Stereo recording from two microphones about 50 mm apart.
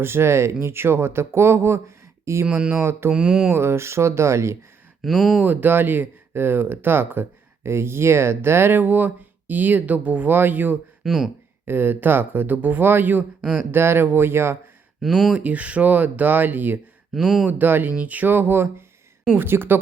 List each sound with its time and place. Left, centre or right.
0.0 s speech: right
0.6 s speech: right
3.1 s a sound: centre
3.5 s speech: right
5.0 s speech: centre
5.4 s speech: right
11.0 s speech: centre
11.6 s speech: right
13.7 s speech: right
15.0 s speech: centre
15.4 s speech: right
17.2 s speech: centre
17.6 s speech: right